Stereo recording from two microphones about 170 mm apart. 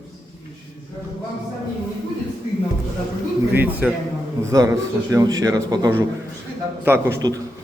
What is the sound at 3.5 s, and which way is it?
A man's voice, 10° right (ahead or behind).